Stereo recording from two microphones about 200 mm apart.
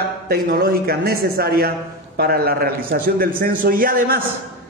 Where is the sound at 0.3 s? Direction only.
50° right (ahead or behind).